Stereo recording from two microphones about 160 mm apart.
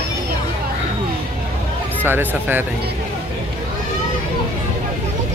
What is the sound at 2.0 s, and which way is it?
Speech, 15° right (ahead or behind).